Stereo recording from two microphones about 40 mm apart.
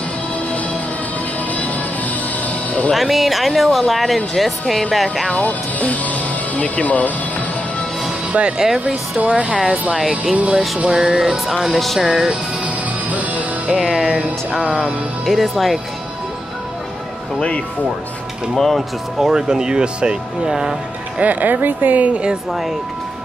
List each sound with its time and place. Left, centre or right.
2.4 s music: left
2.9 s speech: centre
5.3 s speech: left
8.3 s speech: right
8.5 s speech: centre
9.3 s speech: right
9.9 s speech: centre
12.6 s music: right
13.7 s speech: centre
18.5 s speech: centre
18.8 s speech: centre
21.2 s a woman's voice: right
22.1 s speech: right
22.5 s speech: centre